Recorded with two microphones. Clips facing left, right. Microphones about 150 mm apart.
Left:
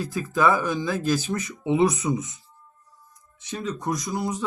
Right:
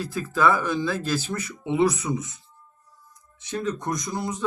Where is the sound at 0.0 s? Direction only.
15° left (ahead or behind).